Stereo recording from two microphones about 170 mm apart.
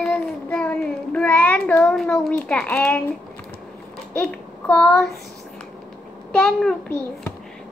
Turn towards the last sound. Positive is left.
turn(degrees=5)  # may be behind; listen again after turning